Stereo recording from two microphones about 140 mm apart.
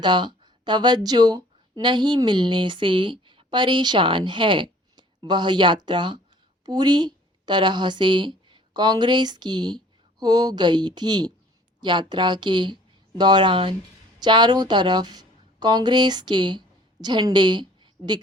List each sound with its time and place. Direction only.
0.0 s a woman's voice: 30° right (ahead or behind)